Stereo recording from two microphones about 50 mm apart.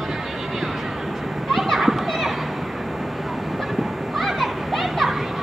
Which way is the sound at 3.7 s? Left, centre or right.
Centre.